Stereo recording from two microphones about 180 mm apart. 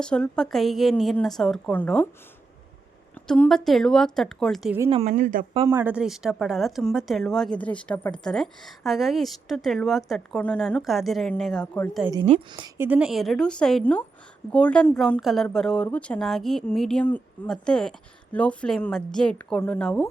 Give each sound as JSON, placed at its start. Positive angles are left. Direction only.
{"t": 0.0, "sound": "speech", "side_deg": 5}
{"t": 3.2, "sound": "speech", "side_deg": 5}
{"t": 4.9, "sound": "a woman's voice", "side_deg": -35}
{"t": 5.6, "sound": "speech", "side_deg": -15}
{"t": 12.2, "sound": "a woman's voice", "side_deg": -30}
{"t": 12.7, "sound": "speech", "side_deg": -10}